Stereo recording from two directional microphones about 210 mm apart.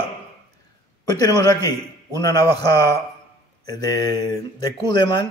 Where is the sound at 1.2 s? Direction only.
20° left (ahead or behind).